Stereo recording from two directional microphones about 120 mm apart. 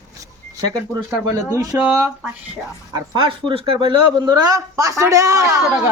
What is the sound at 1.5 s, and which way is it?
Speech, 30° right (ahead or behind).